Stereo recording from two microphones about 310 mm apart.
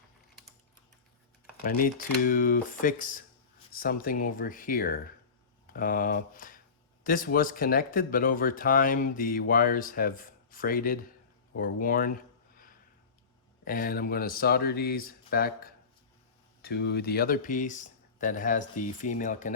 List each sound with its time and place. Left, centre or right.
1.5 s speech: left
13.7 s speech: left